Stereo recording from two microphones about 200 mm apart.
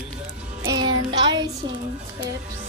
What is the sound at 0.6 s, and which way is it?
Music, 20° right (ahead or behind).